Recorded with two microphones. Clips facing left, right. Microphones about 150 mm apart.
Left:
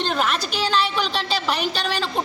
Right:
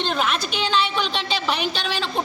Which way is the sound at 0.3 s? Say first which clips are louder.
Even; 40° left (ahead or behind).